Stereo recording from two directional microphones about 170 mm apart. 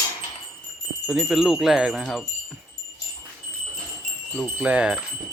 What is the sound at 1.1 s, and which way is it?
Wind chime, 5° right (ahead or behind).